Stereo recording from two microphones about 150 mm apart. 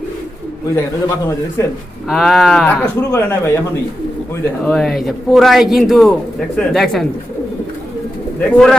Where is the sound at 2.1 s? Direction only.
Centre (ahead or behind).